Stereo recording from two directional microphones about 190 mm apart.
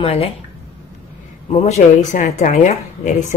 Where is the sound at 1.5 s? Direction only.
35° left (ahead or behind).